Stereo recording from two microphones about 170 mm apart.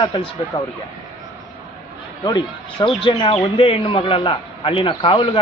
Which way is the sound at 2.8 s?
30° left (ahead or behind).